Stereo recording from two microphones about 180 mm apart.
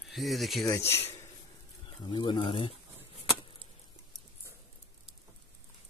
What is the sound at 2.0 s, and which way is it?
Speech, 25° left (ahead or behind).